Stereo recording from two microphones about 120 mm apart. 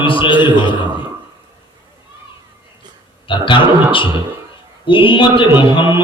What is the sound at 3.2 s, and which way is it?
A man's voice, 45° left (ahead or behind).